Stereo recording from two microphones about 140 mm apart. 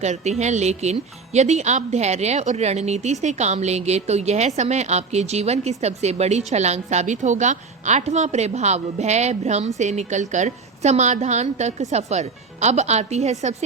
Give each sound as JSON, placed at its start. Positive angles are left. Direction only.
{"t": 0.0, "sound": "speech", "side_deg": -55}